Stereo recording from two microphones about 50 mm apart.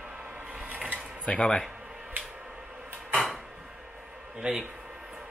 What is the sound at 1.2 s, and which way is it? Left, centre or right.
Speech, centre.